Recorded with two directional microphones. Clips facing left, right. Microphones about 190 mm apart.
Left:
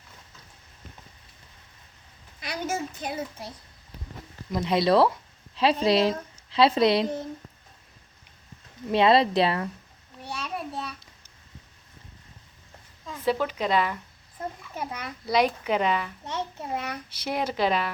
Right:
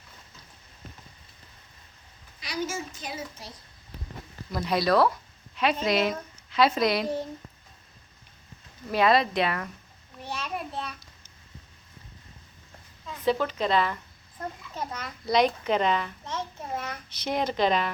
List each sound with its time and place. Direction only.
2.4 s a child's voice: 55° left (ahead or behind)
4.5 s speech: 25° left (ahead or behind)
8.9 s speech: 25° left (ahead or behind)
10.4 s a sound: centre (ahead or behind)
13.2 s a child's voice: 10° left (ahead or behind)